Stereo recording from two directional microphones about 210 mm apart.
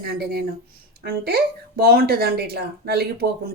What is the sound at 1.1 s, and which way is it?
Speech, 50° right (ahead or behind).